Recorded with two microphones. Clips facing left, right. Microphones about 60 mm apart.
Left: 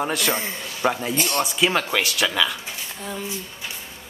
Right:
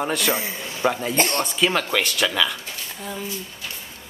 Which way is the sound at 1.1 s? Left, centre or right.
Right.